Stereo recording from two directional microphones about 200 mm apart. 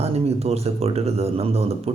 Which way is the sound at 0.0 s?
30° right (ahead or behind).